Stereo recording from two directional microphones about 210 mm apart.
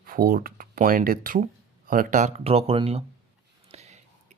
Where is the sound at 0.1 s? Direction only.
45° right (ahead or behind).